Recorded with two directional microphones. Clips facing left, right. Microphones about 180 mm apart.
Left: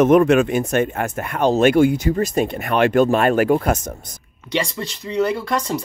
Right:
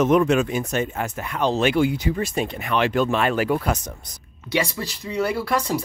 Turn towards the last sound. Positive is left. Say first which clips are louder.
# left 1 dB
turn(degrees=-5)  # may be behind; listen again after turning